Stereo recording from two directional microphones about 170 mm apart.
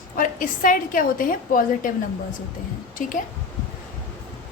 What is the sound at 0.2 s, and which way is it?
A woman's voice, 55° left (ahead or behind).